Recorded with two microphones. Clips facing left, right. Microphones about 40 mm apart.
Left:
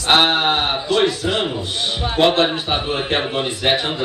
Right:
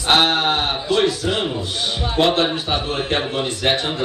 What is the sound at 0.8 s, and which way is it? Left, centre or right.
A man's voice, centre.